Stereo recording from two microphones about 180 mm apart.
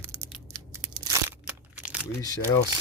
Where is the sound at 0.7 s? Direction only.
15° right (ahead or behind).